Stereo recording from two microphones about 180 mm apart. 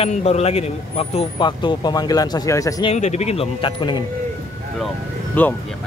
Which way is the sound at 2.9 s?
40° left (ahead or behind).